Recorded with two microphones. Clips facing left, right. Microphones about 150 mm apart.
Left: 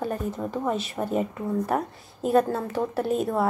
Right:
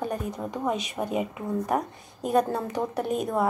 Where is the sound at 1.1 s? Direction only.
10° right (ahead or behind).